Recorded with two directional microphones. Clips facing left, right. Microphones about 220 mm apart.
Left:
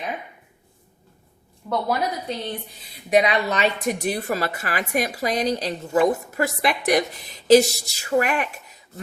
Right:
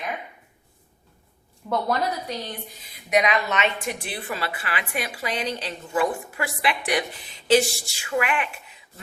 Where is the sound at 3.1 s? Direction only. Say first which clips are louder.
Left 3 dB; 30° left (ahead or behind).